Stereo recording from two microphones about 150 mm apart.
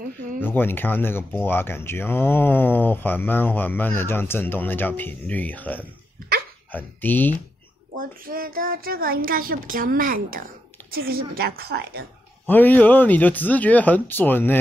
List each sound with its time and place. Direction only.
0.4 s speech: 15° left (ahead or behind)
8.0 s a woman's voice: 70° right (ahead or behind)
10.9 s a woman's voice: 85° right
12.4 s speech: 10° left (ahead or behind)